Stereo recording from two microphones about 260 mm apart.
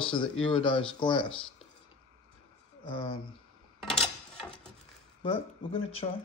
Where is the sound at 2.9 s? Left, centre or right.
Centre.